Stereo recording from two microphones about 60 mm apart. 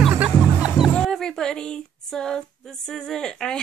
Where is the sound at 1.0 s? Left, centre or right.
Centre.